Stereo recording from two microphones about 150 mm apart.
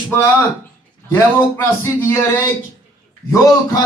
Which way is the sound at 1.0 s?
15° left (ahead or behind).